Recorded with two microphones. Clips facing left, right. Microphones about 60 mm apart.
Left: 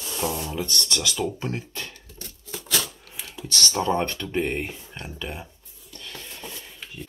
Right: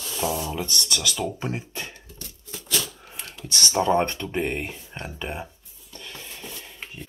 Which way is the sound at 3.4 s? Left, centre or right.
Right.